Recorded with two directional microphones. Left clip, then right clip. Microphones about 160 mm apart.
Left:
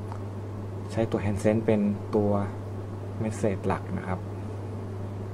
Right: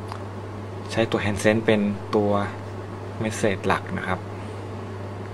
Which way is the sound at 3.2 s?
20° right (ahead or behind).